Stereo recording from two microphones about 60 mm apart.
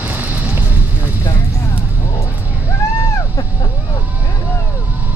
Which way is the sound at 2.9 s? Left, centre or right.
Left.